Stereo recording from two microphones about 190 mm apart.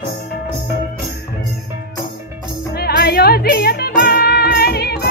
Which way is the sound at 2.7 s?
55° left (ahead or behind).